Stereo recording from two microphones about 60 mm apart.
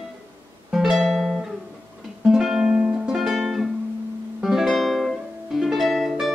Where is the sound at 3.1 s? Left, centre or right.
Centre.